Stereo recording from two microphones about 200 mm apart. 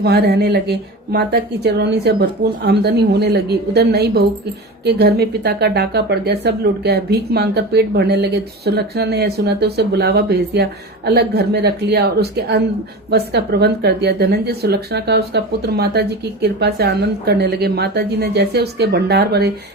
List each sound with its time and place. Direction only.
0.0 s speech: 55° right (ahead or behind)